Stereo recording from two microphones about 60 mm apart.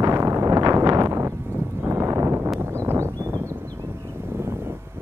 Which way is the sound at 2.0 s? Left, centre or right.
Right.